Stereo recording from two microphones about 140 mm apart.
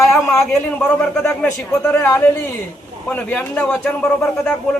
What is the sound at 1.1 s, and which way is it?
Speech, 5° left (ahead or behind).